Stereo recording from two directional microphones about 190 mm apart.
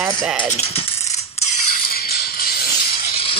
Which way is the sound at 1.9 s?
55° left (ahead or behind).